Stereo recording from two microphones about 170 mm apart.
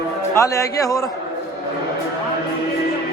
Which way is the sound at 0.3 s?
20° left (ahead or behind).